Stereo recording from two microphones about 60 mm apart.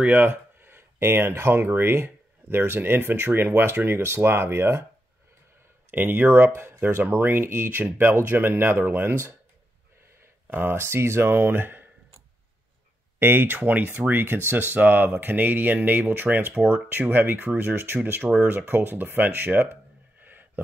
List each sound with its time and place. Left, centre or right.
0.0 s speech: right
5.9 s speech: right
10.4 s speech: right
13.2 s speech: right
18.7 s a sound: right